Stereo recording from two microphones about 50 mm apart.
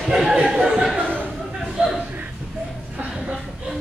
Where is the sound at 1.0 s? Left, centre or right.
Left.